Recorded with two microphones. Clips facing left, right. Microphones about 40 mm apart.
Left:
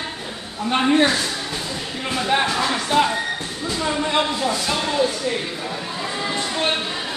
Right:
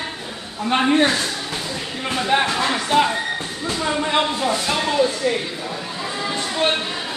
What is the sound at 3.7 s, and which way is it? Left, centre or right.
Speech, centre.